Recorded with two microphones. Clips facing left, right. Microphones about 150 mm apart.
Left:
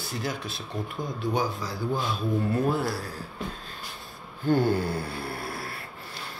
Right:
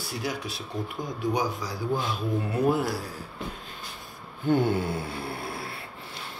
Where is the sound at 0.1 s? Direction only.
10° right (ahead or behind).